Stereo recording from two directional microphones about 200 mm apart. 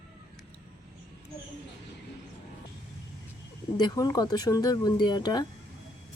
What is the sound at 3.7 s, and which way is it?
Speech, 20° left (ahead or behind).